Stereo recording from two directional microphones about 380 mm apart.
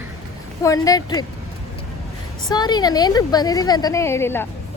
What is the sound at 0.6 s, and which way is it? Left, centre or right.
Speech, centre.